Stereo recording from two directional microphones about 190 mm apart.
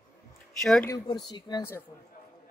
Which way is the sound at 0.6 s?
5° left (ahead or behind).